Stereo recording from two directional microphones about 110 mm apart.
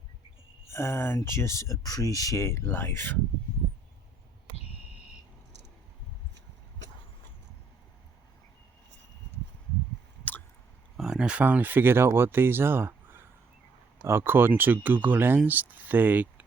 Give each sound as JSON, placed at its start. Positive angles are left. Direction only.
{"t": 0.7, "sound": "speech", "side_deg": 25}
{"t": 10.9, "sound": "speech", "side_deg": -5}